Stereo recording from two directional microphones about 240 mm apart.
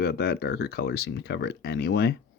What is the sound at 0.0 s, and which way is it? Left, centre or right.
Speech, left.